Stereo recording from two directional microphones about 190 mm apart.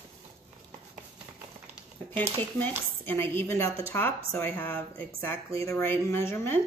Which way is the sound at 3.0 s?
10° left (ahead or behind).